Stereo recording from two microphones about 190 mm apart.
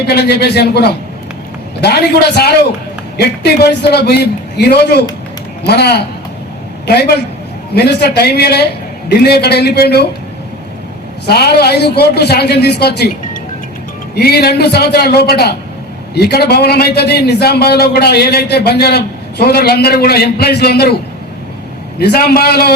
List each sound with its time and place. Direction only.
0.1 s a man's voice: 60° left (ahead or behind)
11.3 s a man's voice: 55° left (ahead or behind)
21.9 s a man's voice: 55° left (ahead or behind)